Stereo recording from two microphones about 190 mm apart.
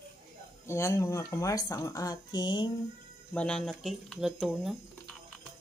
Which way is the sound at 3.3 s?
5° left (ahead or behind).